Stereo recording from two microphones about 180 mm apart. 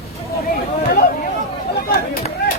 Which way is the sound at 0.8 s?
60° left (ahead or behind).